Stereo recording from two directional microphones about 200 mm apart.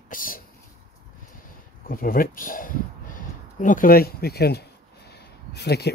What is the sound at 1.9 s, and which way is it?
Speech, 45° left (ahead or behind).